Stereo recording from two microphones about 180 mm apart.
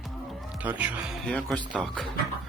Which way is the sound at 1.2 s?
5° left (ahead or behind).